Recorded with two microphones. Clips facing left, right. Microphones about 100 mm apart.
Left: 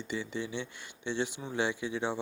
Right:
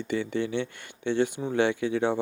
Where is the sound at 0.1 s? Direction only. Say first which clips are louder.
Right 8 dB; 55° right (ahead or behind).